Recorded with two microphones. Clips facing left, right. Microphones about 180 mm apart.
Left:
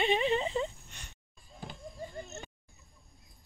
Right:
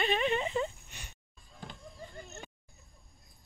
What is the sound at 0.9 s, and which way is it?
Speech, 10° right (ahead or behind).